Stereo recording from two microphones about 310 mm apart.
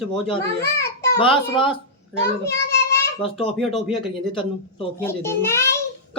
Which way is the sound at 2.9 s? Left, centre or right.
Centre.